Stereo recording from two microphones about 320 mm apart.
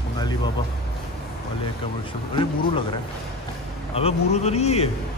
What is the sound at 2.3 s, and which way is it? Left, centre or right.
A man's voice, centre.